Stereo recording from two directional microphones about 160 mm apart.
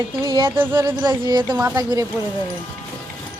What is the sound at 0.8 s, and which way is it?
Speech, 30° right (ahead or behind).